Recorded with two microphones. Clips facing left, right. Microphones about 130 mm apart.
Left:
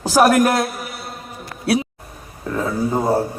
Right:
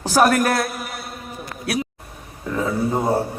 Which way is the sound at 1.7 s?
30° left (ahead or behind).